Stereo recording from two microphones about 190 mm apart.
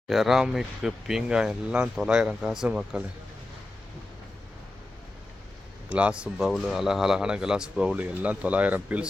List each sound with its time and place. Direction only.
0.1 s speech: centre (ahead or behind)
5.9 s speech: 5° right (ahead or behind)